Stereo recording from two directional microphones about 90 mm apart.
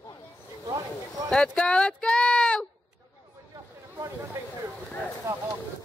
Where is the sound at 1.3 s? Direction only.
10° left (ahead or behind).